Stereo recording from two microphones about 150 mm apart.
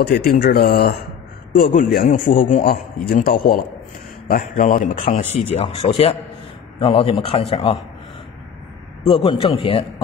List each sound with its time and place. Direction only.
0.0 s speech: 90° left
1.5 s a man's voice: 80° left
4.3 s a man's voice: 75° left (ahead or behind)
4.9 s speech: 55° left (ahead or behind)
6.8 s a man's voice: 40° left (ahead or behind)
9.0 s a man's voice: 35° left (ahead or behind)